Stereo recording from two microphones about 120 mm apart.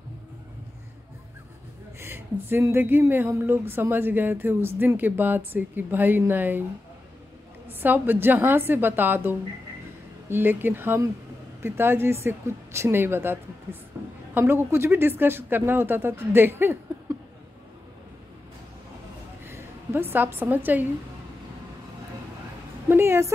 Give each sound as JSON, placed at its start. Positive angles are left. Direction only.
{"t": 2.0, "sound": "speech", "side_deg": -20}
{"t": 7.8, "sound": "speech", "side_deg": -15}
{"t": 13.9, "sound": "a sound", "side_deg": -20}
{"t": 14.3, "sound": "speech", "side_deg": -20}
{"t": 19.4, "sound": "a woman's voice", "side_deg": -20}
{"t": 22.8, "sound": "speech", "side_deg": -20}